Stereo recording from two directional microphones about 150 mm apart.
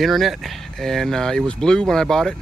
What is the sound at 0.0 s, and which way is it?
Speech, centre (ahead or behind).